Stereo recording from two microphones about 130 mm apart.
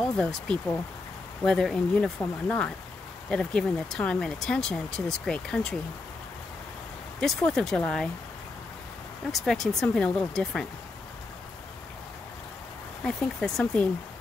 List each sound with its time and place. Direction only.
0.2 s speech: 5° left (ahead or behind)
7.2 s speech: 5° left (ahead or behind)
9.3 s speech: centre (ahead or behind)
13.0 s speech: 5° left (ahead or behind)